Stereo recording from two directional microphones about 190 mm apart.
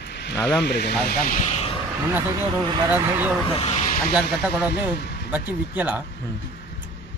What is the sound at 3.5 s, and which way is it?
Speech, 35° left (ahead or behind).